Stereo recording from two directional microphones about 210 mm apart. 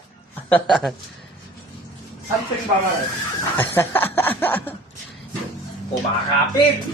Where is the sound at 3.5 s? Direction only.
10° left (ahead or behind).